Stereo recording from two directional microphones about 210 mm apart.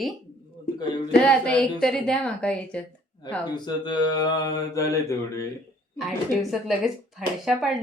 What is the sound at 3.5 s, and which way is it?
Mantra, 20° left (ahead or behind).